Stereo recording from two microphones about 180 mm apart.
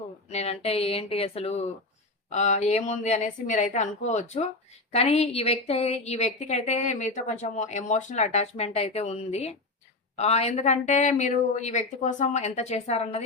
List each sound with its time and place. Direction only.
0.3 s a woman's voice: 35° left (ahead or behind)